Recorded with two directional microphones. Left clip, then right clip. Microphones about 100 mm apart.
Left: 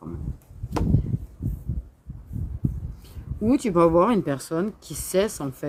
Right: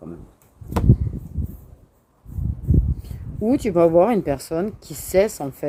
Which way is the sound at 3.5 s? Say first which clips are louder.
Right 3 dB; 25° left (ahead or behind).